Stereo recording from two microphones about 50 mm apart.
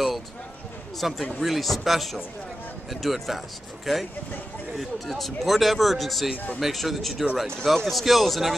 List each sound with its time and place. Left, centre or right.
0.9 s a man's voice: centre
6.3 s speech: left
6.6 s a man's voice: centre